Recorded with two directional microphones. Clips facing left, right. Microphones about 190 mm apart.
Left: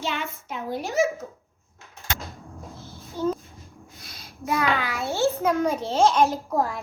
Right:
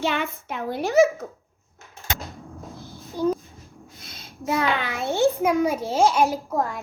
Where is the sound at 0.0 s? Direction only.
60° right (ahead or behind).